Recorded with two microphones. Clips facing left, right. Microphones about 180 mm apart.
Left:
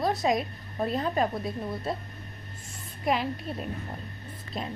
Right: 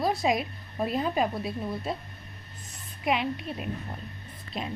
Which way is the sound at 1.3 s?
Centre (ahead or behind).